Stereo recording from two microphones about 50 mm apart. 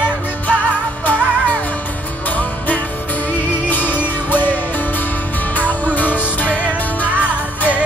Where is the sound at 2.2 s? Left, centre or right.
Left.